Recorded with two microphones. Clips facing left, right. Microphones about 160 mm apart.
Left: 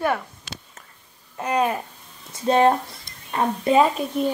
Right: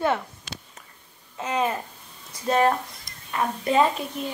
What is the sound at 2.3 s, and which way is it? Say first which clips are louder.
A woman's voice: left 4 dB; 25° left (ahead or behind).